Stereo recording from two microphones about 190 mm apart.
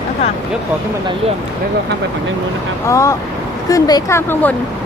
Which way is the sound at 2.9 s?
15° left (ahead or behind).